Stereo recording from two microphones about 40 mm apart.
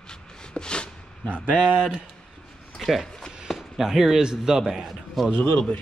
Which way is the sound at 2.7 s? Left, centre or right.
Centre.